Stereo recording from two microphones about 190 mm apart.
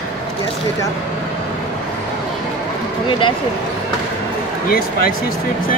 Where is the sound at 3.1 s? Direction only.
25° left (ahead or behind).